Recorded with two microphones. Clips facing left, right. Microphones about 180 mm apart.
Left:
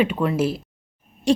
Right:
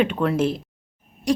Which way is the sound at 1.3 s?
25° left (ahead or behind).